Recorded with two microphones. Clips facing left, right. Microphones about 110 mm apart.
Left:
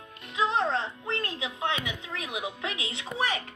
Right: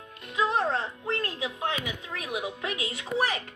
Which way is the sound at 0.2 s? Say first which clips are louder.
Right 1 dB; 45° right (ahead or behind).